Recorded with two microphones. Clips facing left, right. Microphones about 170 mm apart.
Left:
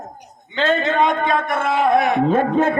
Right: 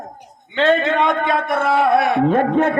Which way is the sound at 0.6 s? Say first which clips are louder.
Right 1 dB; 60° right (ahead or behind).